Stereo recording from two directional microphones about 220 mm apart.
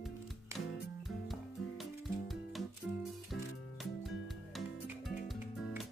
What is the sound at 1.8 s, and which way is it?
Music, centre (ahead or behind).